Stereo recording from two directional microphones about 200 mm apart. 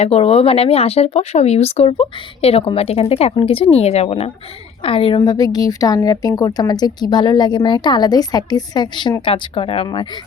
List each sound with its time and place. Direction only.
0.0 s a woman's voice: 30° left (ahead or behind)